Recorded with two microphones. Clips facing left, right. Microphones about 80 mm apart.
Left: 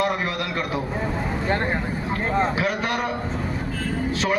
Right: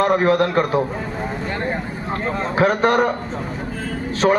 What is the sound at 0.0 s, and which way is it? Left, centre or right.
Speech, right.